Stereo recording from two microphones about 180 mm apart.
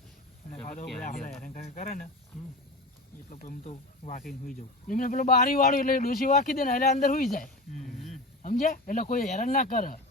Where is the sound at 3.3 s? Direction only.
45° left (ahead or behind).